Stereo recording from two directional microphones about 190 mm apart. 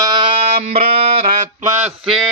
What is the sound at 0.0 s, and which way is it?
Music, 25° right (ahead or behind).